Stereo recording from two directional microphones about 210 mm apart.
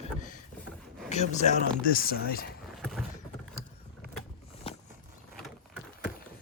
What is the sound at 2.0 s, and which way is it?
Speech, 45° left (ahead or behind).